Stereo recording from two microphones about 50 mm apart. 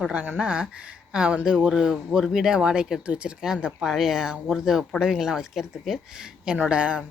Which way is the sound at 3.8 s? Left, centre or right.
Centre.